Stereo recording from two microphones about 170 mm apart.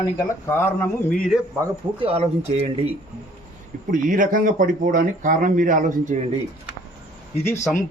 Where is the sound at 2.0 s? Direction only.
35° right (ahead or behind).